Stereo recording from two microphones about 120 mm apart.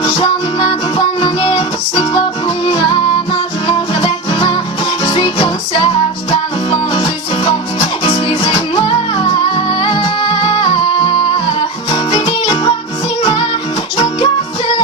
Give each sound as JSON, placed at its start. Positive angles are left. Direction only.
{"t": 0.0, "sound": "music", "side_deg": 45}
{"t": 3.7, "sound": "music", "side_deg": 45}